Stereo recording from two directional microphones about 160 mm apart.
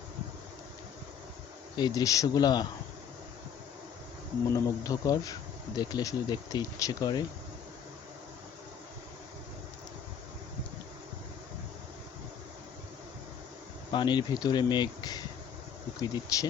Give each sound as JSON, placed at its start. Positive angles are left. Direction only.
{"t": 1.7, "sound": "speech", "side_deg": 25}
{"t": 4.5, "sound": "speech", "side_deg": 20}
{"t": 13.9, "sound": "speech", "side_deg": 30}